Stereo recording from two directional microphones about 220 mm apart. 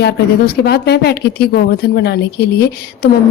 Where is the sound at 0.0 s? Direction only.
50° left (ahead or behind).